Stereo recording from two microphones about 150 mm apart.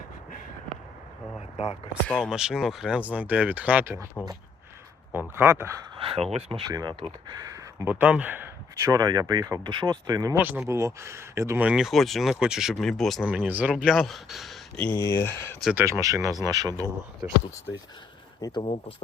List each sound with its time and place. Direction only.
2.0 s speech: 10° left (ahead or behind)
2.3 s speech: 5° right (ahead or behind)
5.1 s speech: 15° right (ahead or behind)
6.0 s speech: 35° right (ahead or behind); by 13.5 s centre (ahead or behind)
13.5 s speech: 10° right (ahead or behind)
14.9 s speech: 20° left (ahead or behind)
15.7 s speech: 15° right (ahead or behind)
18.4 s speech: 25° left (ahead or behind)